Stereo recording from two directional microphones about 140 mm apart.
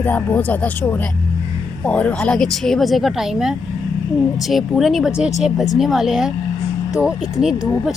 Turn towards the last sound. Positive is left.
turn(degrees=-5)  # may be behind; listen again after turning